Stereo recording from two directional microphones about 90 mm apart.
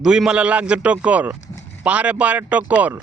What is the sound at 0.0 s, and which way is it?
A man's voice, 5° right (ahead or behind).